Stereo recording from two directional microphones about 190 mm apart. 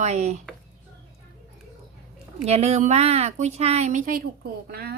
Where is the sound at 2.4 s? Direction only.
35° right (ahead or behind).